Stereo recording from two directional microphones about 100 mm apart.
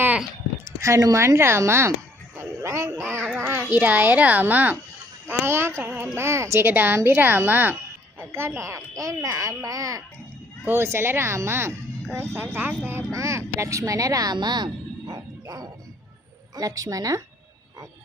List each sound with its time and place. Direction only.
0.6 s speech: 30° right (ahead or behind)
2.3 s a sound: 30° right (ahead or behind)
3.2 s a child's voice: 10° left (ahead or behind)
3.4 s a child's voice: 20° right (ahead or behind)
10.7 s speech: 25° right (ahead or behind)
14.3 s bow-wow: 45° right (ahead or behind)
16.6 s a woman's voice: 35° right (ahead or behind)